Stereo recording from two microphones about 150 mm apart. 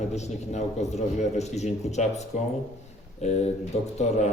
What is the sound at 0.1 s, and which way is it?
A man's voice, 50° left (ahead or behind).